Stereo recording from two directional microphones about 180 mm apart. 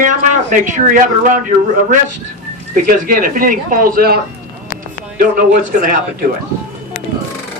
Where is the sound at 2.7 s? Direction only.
50° right (ahead or behind).